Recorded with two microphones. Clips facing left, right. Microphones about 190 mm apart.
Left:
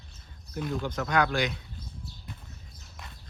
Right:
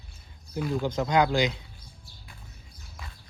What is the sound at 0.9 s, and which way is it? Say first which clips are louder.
Speech: right 3 dB; 20° right (ahead or behind).